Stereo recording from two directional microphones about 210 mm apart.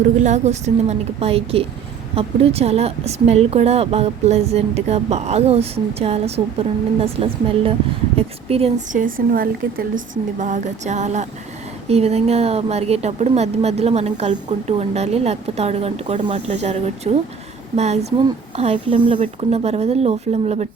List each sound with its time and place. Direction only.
0.2 s speech: 35° right (ahead or behind)